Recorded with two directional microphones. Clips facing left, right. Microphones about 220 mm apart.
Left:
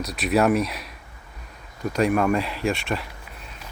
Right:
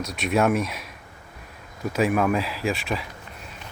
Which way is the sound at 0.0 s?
Centre (ahead or behind).